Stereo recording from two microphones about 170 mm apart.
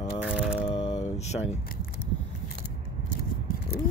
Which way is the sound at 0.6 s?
35° left (ahead or behind).